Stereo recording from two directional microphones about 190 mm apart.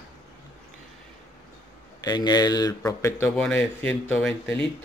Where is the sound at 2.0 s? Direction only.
20° left (ahead or behind); by 4.6 s 5° left (ahead or behind).